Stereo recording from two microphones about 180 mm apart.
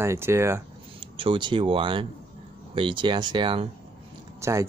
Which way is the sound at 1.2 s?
30° right (ahead or behind).